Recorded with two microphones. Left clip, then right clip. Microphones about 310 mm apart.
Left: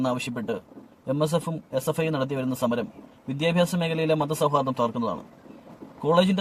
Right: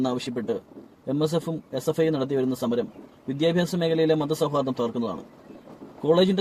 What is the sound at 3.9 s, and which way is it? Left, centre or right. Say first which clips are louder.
Speech: right 2 dB; left.